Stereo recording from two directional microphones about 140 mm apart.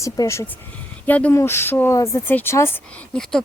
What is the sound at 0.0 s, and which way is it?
Speech, 20° left (ahead or behind).